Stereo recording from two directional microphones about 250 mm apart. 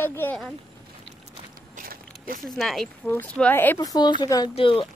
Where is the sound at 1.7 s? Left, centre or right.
Right.